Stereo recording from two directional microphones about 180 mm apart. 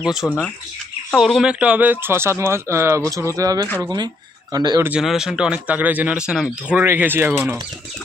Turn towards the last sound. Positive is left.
turn(degrees=-5)  # may be behind; listen again after turning